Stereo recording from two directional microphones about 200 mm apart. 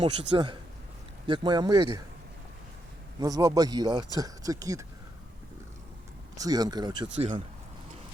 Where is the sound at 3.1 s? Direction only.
20° right (ahead or behind).